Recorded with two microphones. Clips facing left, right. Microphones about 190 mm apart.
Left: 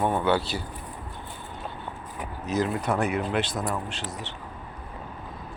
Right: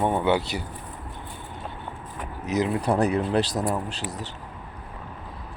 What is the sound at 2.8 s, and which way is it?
Speech, 35° right (ahead or behind).